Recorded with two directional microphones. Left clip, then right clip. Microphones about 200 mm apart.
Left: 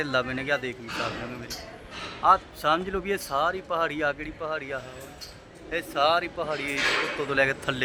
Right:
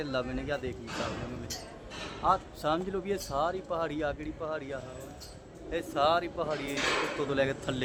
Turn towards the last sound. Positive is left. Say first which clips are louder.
# left 6 dB
turn(degrees=10)  # may be behind; listen again after turning